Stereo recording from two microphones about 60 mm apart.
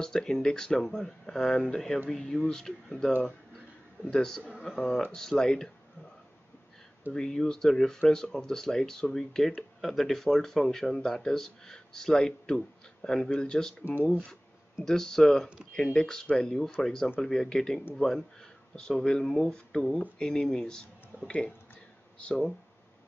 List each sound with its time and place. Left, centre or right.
0.0 s speech: centre
4.1 s speech: centre
4.5 s speech: centre
4.7 s speech: centre
7.1 s speech: centre
14.9 s speech: centre